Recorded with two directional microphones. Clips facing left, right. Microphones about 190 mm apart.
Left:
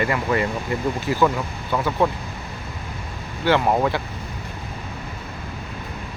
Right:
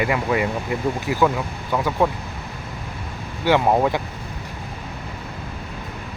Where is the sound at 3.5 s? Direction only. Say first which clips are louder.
Right 1 dB; 15° right (ahead or behind).